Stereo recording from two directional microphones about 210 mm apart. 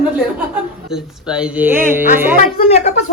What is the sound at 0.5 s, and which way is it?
Speech, 5° right (ahead or behind).